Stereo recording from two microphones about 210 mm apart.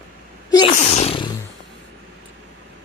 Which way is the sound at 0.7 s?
30° left (ahead or behind).